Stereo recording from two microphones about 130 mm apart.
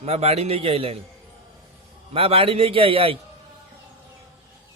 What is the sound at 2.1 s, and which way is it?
A man's voice, 50° right (ahead or behind).